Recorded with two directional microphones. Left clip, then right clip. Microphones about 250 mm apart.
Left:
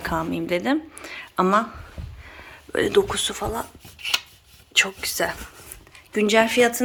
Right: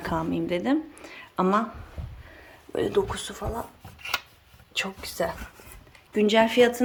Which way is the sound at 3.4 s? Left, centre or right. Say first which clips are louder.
Left 5 dB; centre.